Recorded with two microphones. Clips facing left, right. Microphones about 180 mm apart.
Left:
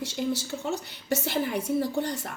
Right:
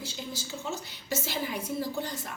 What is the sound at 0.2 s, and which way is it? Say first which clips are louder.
A woman's voice: left 11 dB; 65° left (ahead or behind).